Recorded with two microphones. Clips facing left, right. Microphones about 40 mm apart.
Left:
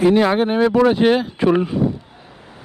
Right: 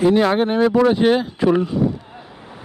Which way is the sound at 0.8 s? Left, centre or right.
Centre.